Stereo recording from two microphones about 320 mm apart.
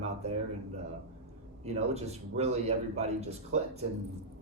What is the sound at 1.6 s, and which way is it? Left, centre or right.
A man's voice, centre.